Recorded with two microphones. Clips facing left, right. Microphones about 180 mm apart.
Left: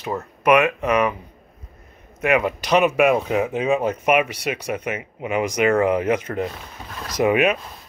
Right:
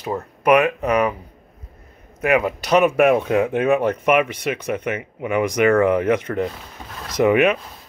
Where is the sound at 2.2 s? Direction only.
35° right (ahead or behind).